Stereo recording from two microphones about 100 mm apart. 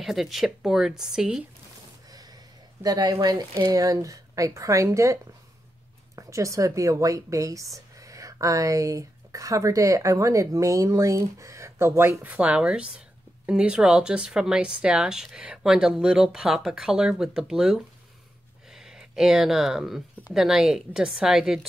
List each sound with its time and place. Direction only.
0.0 s speech: centre (ahead or behind)
2.0 s a woman's voice: 40° right (ahead or behind); by 21.5 s 5° right (ahead or behind)